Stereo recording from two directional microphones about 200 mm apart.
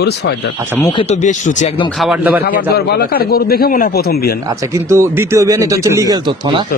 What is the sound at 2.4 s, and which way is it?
A man's voice, 50° left (ahead or behind).